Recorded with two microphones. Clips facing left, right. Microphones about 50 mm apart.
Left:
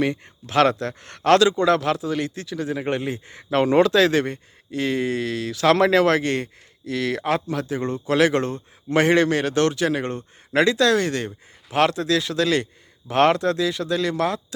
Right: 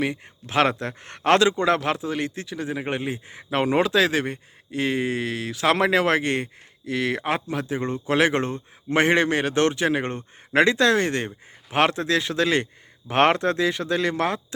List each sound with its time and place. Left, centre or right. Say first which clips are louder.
0.4 s speech: left 3 dB; centre